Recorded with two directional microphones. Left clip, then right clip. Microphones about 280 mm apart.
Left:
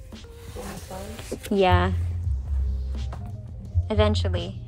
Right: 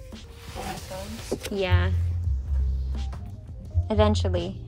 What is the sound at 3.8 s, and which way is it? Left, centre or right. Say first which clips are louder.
Speech: even; centre.